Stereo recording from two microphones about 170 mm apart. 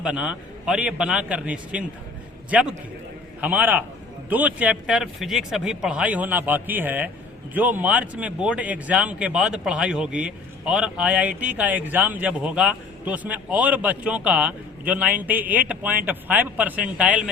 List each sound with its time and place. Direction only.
0.0 s speech: 5° right (ahead or behind)